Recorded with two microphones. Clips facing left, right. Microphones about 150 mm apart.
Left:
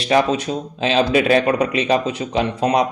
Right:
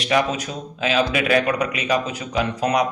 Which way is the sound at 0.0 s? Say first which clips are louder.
Left 4 dB; 30° left (ahead or behind).